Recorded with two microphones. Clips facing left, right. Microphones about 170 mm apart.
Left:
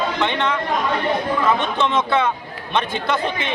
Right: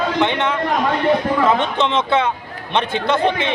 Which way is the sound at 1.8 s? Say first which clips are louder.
Even; 20° right (ahead or behind).